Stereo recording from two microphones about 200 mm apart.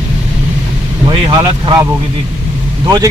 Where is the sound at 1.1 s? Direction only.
25° right (ahead or behind).